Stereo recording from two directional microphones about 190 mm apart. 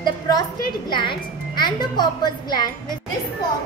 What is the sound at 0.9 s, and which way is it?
Speech, 25° left (ahead or behind).